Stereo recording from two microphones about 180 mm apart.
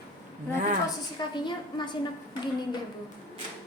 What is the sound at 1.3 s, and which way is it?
Speech, 25° left (ahead or behind).